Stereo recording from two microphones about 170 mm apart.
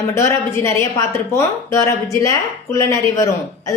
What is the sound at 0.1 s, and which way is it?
A woman's voice, 15° left (ahead or behind).